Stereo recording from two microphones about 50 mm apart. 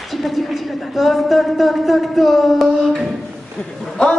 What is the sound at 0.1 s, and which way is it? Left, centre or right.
A woman's voice, centre.